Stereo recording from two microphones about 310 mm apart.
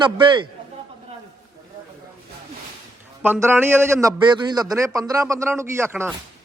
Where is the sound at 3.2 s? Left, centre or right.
Centre.